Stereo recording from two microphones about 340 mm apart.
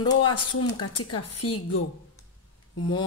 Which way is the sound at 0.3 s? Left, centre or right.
Left.